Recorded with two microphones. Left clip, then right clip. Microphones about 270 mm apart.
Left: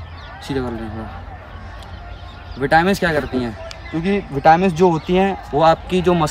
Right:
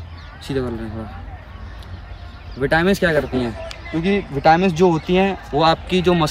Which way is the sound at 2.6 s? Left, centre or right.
Centre.